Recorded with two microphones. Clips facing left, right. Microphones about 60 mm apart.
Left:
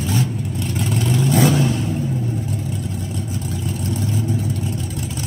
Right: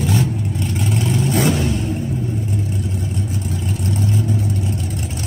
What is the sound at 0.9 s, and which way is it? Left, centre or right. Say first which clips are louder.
Vehicle: even; right.